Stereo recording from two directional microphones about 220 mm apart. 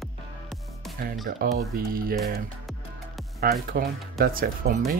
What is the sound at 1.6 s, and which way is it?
Speech, 40° right (ahead or behind).